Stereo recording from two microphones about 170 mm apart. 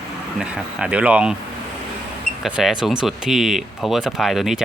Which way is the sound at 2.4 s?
5° right (ahead or behind).